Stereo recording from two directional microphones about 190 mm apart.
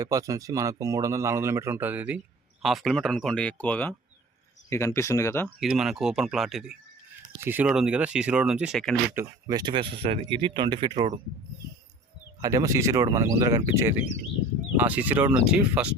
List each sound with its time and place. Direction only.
0.0 s speech: 15° right (ahead or behind); by 5.5 s 15° left (ahead or behind)
5.5 s speech: 5° right (ahead or behind)
9.1 s speech: 20° right (ahead or behind)
12.4 s speech: 20° right (ahead or behind)